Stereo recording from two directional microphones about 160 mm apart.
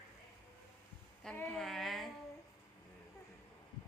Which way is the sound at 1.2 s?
5° left (ahead or behind).